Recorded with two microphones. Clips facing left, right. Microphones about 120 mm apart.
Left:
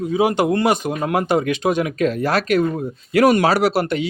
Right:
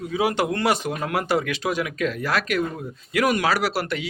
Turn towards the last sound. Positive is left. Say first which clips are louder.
# left 7 dB
turn(degrees=25)  # may be behind; listen again after turning